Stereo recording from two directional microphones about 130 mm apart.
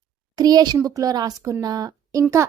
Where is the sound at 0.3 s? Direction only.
30° right (ahead or behind).